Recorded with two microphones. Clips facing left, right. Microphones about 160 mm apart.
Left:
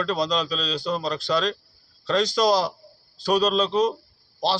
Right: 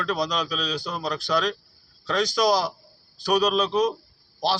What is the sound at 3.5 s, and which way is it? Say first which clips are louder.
Speech: left 1 dB; 10° right (ahead or behind).